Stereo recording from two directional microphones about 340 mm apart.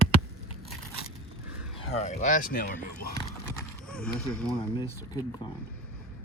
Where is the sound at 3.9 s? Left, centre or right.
Centre.